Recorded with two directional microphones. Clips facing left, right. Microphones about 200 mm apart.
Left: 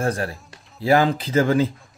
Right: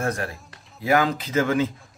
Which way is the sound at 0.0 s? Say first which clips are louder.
Left 3 dB; 30° left (ahead or behind).